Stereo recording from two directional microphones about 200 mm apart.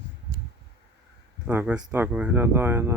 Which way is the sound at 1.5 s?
10° right (ahead or behind).